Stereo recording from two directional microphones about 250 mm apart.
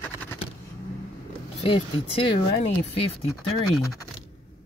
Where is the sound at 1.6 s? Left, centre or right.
Left.